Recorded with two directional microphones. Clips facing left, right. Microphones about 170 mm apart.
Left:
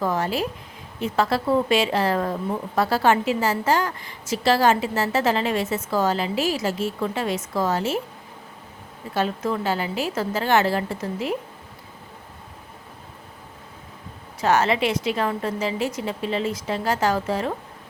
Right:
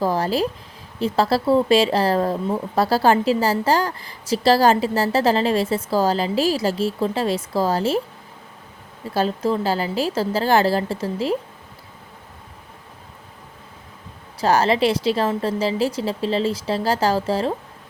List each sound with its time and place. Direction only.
0.0 s speech: 35° right (ahead or behind)
9.1 s speech: 30° right (ahead or behind)
14.4 s speech: 35° right (ahead or behind)